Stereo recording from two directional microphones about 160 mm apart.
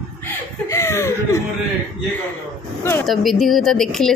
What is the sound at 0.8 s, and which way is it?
Chuckle, 15° left (ahead or behind).